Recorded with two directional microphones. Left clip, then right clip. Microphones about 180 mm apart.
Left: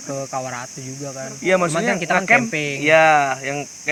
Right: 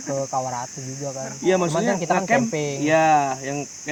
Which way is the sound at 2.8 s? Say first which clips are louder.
Left 4 dB; 25° left (ahead or behind).